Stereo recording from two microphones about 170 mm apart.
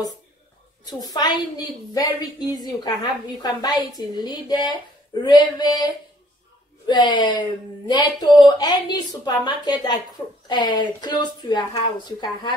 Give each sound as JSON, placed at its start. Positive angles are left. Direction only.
{"t": 0.8, "sound": "a woman's voice", "side_deg": 20}
{"t": 6.9, "sound": "a woman's voice", "side_deg": 25}